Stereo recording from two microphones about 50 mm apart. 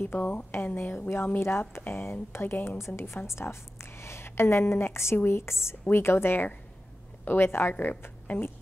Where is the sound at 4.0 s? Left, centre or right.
Left.